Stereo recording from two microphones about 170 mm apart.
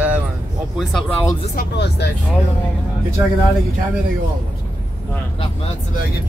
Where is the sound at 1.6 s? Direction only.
80° left.